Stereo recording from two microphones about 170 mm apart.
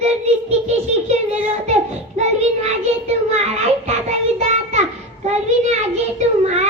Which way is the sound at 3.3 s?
40° right (ahead or behind).